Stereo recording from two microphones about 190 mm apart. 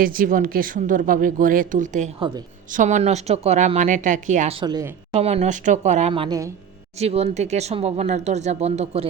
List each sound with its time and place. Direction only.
0.0 s speech: 45° right (ahead or behind)
4.6 s a woman's voice: 20° right (ahead or behind)
5.2 s speech: 35° right (ahead or behind)
7.0 s speech: 35° right (ahead or behind)